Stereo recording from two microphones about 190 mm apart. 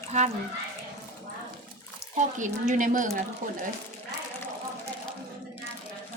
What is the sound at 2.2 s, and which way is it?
Speech, 40° right (ahead or behind).